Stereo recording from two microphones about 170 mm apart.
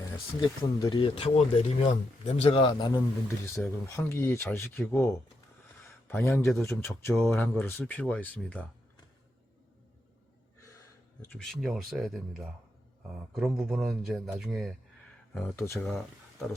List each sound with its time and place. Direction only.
0.8 s speech: 30° left (ahead or behind); by 8.6 s 10° left (ahead or behind)
10.7 s gasp: 20° left (ahead or behind)
11.3 s speech: centre (ahead or behind)
15.5 s speech: 15° left (ahead or behind)
15.9 s speech: centre (ahead or behind)